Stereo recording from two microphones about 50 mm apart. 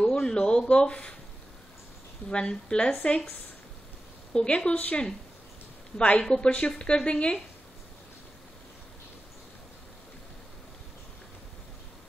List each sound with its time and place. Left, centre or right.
0.0 s a sound: centre
2.2 s a woman's voice: centre
4.3 s a woman's voice: centre